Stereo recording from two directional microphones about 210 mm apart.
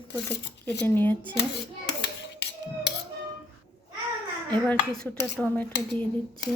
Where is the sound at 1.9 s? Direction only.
55° left (ahead or behind).